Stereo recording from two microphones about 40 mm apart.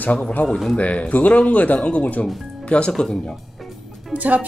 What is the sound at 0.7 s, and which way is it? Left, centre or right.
Speech, left.